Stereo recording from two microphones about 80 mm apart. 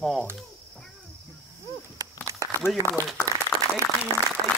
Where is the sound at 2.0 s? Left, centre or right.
Right.